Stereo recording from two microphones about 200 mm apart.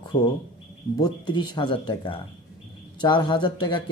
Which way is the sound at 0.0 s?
20° left (ahead or behind).